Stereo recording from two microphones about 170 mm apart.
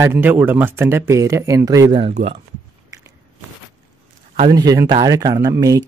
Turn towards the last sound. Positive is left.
turn(degrees=-20)  # may be behind; listen again after turning